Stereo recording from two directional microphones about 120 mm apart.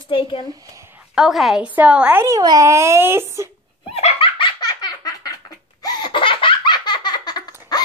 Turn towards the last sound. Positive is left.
turn(degrees=35)  # may be behind; listen again after turning